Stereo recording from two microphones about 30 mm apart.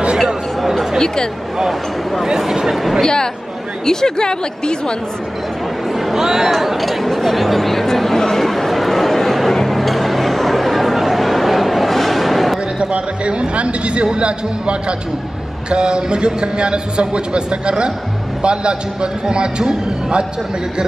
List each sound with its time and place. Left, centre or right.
0.9 s a woman's voice: left
2.2 s speech: centre
2.7 s speech: centre
3.0 s a woman's voice: left
5.9 s a sound: centre
6.2 s speech: centre
6.5 s chatter: centre
11.0 s a sound: centre
12.7 s a man's voice: right